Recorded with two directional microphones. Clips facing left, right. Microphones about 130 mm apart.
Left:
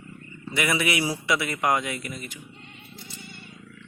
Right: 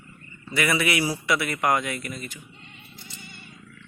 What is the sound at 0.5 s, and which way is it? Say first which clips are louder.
Speech: right 1 dB; 20° left (ahead or behind).